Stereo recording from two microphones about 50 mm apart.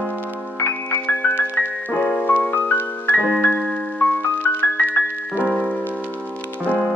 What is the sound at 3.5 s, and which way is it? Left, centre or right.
Music, centre.